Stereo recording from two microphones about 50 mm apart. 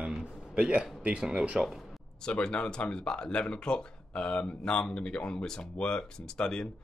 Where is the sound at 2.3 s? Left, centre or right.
Left.